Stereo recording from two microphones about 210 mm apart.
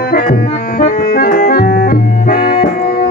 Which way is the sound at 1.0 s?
45° left (ahead or behind).